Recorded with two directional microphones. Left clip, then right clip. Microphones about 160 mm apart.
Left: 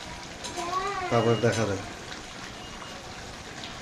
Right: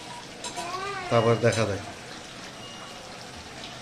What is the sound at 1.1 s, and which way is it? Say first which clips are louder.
Speech: right 3 dB; 5° right (ahead or behind).